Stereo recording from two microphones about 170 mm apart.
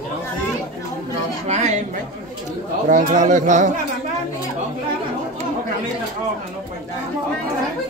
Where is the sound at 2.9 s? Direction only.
45° right (ahead or behind).